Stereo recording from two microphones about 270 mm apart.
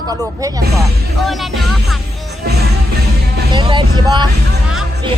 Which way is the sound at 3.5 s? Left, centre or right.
Centre.